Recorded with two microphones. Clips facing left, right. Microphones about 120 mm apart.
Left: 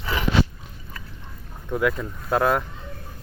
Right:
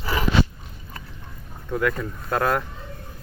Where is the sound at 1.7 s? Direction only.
5° left (ahead or behind).